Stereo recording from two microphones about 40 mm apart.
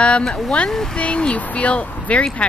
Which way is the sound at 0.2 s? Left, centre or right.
Centre.